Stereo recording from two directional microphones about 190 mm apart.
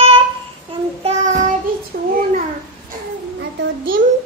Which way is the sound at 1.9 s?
50° right (ahead or behind).